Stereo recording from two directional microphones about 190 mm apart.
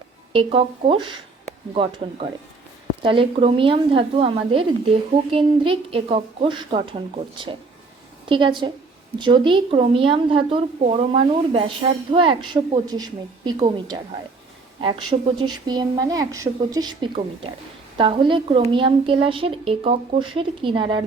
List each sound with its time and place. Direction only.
0.3 s speech: 25° right (ahead or behind)
8.3 s speech: 25° right (ahead or behind)
15.4 s speech: 20° right (ahead or behind)